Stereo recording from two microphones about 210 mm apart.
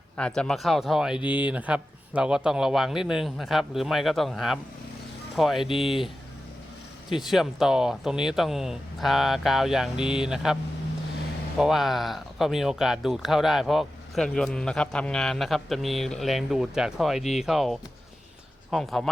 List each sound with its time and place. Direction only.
0.2 s speech: 5° left (ahead or behind)
5.6 s speech: 25° left (ahead or behind)
7.1 s speech: centre (ahead or behind)